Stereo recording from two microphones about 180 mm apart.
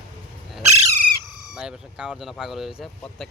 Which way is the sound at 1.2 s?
Centre (ahead or behind).